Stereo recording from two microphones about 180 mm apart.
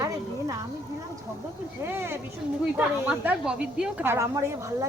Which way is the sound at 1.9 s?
10° right (ahead or behind).